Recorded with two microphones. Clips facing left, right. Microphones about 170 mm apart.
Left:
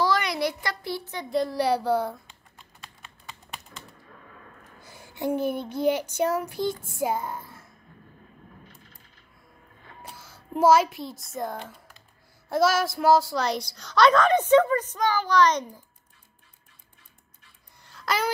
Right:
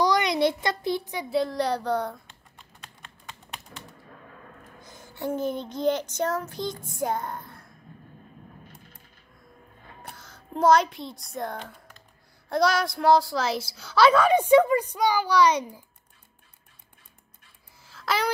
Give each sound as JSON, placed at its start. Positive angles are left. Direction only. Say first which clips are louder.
{"t": 0.0, "sound": "a sound", "louder": "right 3 dB", "side_deg": -20}
{"t": 1.3, "sound": "speech", "louder": "left 1 dB", "side_deg": 0}
{"t": 3.0, "sound": "typing", "louder": "right 1 dB", "side_deg": 5}
{"t": 4.8, "sound": "child singing", "louder": "left 3 dB", "side_deg": 10}
{"t": 7.0, "sound": "speech", "louder": "right 1 dB", "side_deg": 5}
{"t": 10.1, "sound": "a child's voice", "louder": "left 3 dB", "side_deg": 10}
{"t": 17.8, "sound": "a sound", "louder": "even", "side_deg": 0}